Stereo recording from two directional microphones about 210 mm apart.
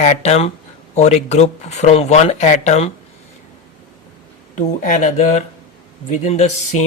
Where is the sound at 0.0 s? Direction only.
30° left (ahead or behind).